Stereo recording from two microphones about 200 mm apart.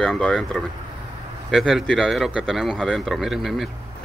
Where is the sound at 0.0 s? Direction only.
5° left (ahead or behind).